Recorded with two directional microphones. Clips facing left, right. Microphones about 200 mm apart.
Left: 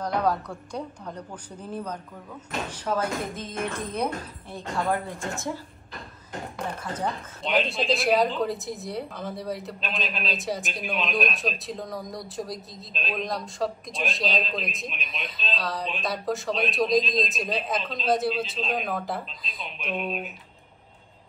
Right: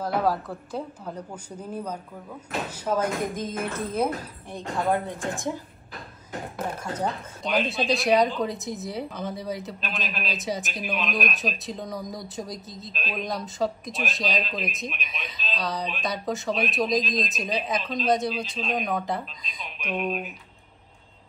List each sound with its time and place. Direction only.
0.0 s speech: 5° right (ahead or behind)
4.5 s speech: 20° right (ahead or behind)
6.7 s speech: 10° right (ahead or behind)